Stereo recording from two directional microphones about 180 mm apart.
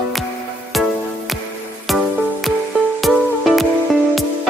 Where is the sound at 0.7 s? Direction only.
Centre (ahead or behind).